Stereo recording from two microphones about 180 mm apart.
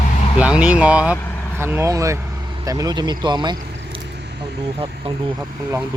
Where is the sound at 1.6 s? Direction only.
15° right (ahead or behind).